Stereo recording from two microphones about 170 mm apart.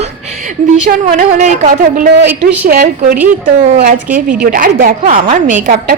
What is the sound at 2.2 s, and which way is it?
Speech, 90° right.